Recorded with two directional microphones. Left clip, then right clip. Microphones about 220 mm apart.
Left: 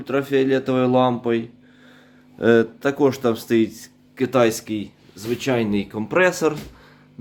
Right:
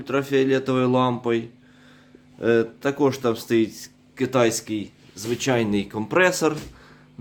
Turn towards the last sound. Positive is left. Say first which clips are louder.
# left 1 dB
turn(degrees=-10)  # may be behind; listen again after turning